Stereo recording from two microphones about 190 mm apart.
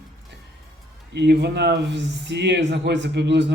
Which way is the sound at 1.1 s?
60° right (ahead or behind).